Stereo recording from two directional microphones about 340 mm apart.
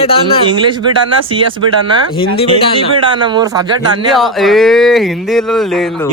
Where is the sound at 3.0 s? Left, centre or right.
Centre.